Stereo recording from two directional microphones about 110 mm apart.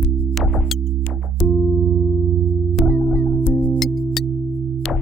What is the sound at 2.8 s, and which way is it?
Music, 15° left (ahead or behind).